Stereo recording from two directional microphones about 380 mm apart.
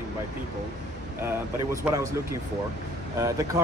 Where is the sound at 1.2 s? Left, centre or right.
Centre.